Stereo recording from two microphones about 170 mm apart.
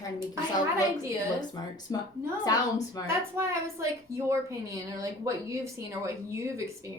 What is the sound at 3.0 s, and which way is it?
A woman's voice, 15° right (ahead or behind).